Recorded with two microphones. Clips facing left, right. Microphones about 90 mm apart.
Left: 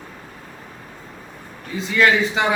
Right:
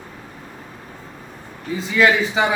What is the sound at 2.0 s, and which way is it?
Speech, 5° right (ahead or behind).